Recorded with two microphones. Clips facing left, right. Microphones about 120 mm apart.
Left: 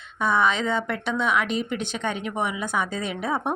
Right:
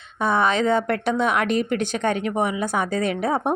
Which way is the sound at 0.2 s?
35° right (ahead or behind).